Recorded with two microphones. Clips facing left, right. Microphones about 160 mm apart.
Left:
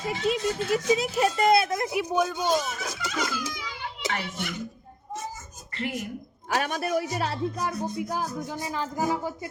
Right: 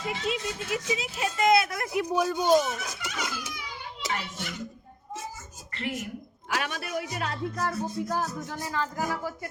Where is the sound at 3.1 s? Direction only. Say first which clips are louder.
Left 6 dB; 90° left.